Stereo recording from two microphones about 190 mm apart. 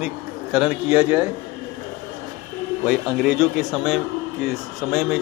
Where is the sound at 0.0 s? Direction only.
5° right (ahead or behind).